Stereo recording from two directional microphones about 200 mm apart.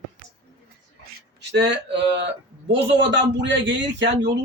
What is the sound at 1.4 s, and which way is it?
A man's voice, 60° right (ahead or behind).